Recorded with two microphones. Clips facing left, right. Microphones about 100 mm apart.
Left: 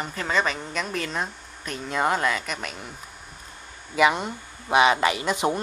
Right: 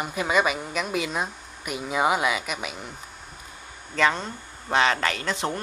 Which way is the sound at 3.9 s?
15° left (ahead or behind).